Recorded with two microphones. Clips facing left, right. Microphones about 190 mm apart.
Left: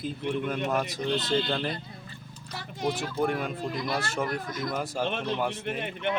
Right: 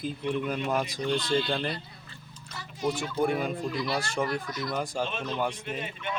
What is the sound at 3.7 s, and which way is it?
Speech, 50° left (ahead or behind).